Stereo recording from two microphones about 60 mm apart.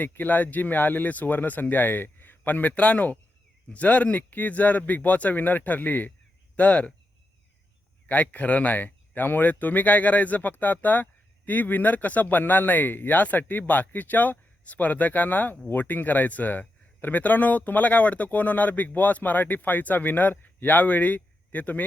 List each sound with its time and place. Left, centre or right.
0.1 s speech: left
8.0 s speech: left